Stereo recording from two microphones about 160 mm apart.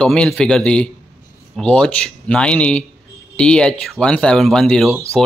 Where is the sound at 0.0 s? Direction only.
5° left (ahead or behind).